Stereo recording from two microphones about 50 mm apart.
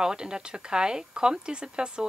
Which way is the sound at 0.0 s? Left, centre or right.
Centre.